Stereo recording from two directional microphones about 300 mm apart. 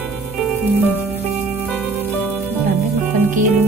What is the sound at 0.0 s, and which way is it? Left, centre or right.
Music, centre.